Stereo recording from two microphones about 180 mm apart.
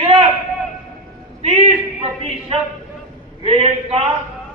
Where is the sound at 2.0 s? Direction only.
35° right (ahead or behind).